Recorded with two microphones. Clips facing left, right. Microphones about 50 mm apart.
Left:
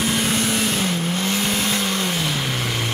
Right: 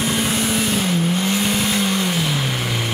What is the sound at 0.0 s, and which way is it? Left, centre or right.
Vehicle, centre.